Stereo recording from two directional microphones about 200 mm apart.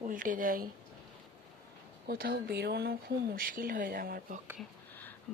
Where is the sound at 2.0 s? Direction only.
50° right (ahead or behind).